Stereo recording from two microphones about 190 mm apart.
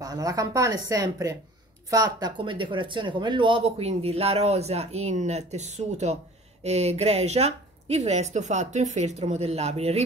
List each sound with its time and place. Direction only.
0.0 s speech: 20° right (ahead or behind); by 10.0 s 35° right (ahead or behind)